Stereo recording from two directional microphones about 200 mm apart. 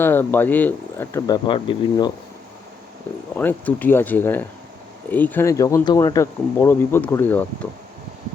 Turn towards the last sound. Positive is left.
turn(degrees=10)  # may be behind; listen again after turning